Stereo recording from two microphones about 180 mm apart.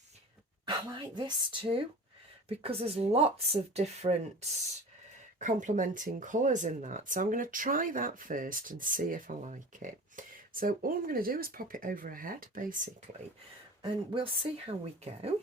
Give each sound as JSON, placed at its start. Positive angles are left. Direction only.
{"t": 0.6, "sound": "speech", "side_deg": -25}
{"t": 2.5, "sound": "speech", "side_deg": -30}
{"t": 13.8, "sound": "speech", "side_deg": -30}